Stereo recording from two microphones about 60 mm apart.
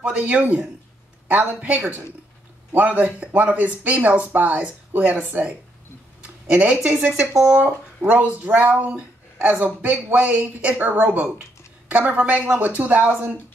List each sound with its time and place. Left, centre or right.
0.1 s speech: right
6.2 s a sound: right
7.1 s speech: centre
8.0 s speech: right